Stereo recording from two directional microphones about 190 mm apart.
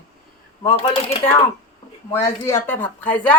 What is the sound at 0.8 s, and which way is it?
Speech, 30° left (ahead or behind).